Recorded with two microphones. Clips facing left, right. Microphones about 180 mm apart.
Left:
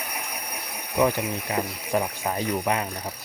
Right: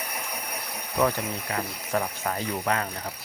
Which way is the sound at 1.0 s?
15° left (ahead or behind).